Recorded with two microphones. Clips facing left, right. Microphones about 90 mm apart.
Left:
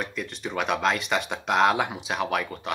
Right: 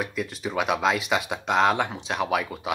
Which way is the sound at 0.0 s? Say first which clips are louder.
Right 3 dB; 5° right (ahead or behind).